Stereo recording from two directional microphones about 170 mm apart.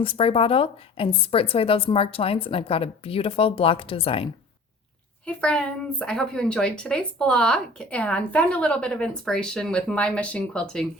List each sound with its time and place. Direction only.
0.0 s a woman's voice: 35° left (ahead or behind)
5.2 s a woman's voice: 5° left (ahead or behind)